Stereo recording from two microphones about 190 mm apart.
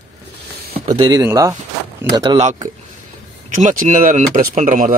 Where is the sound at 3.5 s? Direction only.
45° right (ahead or behind).